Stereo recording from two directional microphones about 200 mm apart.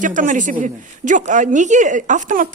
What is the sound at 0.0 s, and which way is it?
A woman's voice, 40° right (ahead or behind).